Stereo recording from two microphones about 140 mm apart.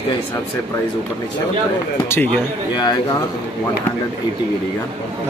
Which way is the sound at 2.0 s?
15° left (ahead or behind).